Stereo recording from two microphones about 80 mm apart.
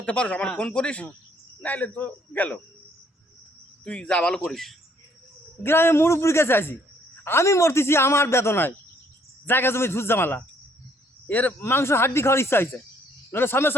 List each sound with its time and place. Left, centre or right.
0.0 s a man's voice: centre
3.8 s a man's voice: centre
4.4 s speech: centre
5.6 s a man's voice: left
11.6 s a man's voice: left